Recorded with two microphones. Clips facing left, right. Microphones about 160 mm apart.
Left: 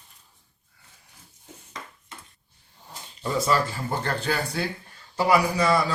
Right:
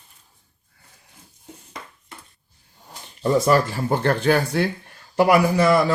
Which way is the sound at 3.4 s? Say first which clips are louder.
Right 6 dB; 55° right (ahead or behind).